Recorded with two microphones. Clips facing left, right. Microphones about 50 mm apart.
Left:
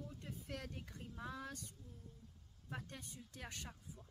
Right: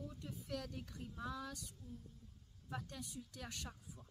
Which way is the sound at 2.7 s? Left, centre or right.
Left.